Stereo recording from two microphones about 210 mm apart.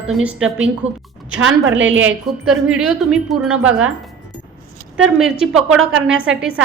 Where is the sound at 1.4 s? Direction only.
70° right (ahead or behind).